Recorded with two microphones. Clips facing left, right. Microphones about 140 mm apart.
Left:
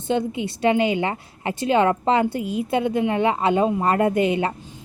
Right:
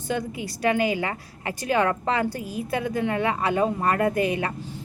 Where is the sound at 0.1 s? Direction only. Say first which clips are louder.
Left 6 dB; 25° left (ahead or behind).